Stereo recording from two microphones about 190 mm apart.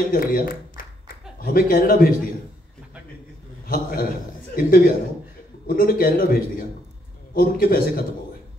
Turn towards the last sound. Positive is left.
turn(degrees=50)  # may be behind; listen again after turning